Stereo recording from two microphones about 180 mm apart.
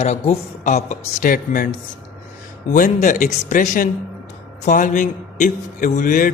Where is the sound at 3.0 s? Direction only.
45° left (ahead or behind).